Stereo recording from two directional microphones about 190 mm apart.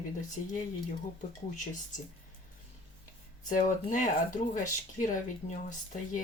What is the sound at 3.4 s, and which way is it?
Speech, 40° left (ahead or behind).